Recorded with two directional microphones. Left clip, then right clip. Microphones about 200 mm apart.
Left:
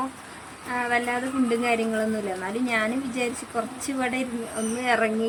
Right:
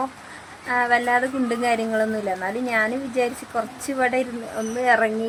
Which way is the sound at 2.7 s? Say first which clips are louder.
Right 4 dB; 5° right (ahead or behind).